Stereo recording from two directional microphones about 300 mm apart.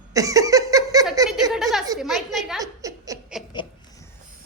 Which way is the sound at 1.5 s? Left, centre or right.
Centre.